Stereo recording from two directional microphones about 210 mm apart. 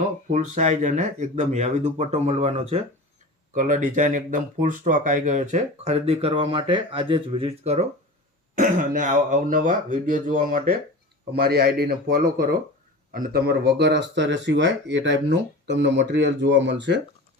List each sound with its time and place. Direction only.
0.3 s speech: 35° right (ahead or behind); by 17.0 s 55° right (ahead or behind)